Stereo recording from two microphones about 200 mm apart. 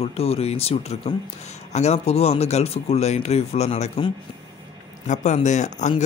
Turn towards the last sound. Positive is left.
turn(degrees=35)  # may be behind; listen again after turning